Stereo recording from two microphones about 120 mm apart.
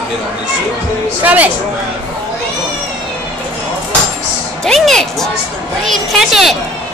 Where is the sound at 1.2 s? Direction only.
15° right (ahead or behind).